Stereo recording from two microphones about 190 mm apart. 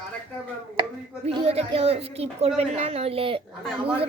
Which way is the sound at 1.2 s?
30° right (ahead or behind).